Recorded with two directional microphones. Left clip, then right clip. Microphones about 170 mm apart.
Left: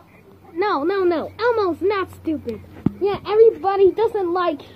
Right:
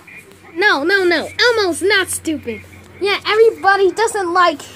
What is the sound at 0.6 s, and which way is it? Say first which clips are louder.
A woman's voice: right 6 dB; 25° right (ahead or behind).